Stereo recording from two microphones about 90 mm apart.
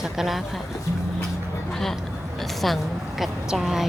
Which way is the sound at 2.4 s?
Centre (ahead or behind).